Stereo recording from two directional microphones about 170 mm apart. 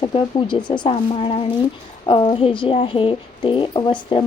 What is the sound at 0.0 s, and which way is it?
Speech, 30° left (ahead or behind).